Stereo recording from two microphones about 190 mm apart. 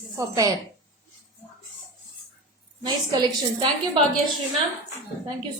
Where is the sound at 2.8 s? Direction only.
25° right (ahead or behind).